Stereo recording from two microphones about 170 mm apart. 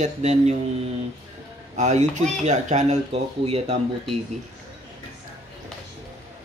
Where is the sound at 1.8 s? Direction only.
45° right (ahead or behind).